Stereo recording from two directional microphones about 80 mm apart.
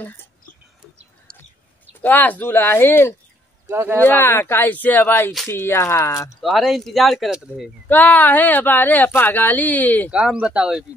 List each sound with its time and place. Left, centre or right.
2.0 s speech: left
3.6 s speech: right
4.0 s speech: left
6.4 s speech: centre
7.9 s speech: left
10.1 s speech: centre